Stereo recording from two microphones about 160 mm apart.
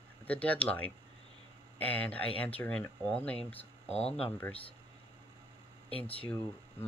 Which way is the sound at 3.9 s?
40° left (ahead or behind).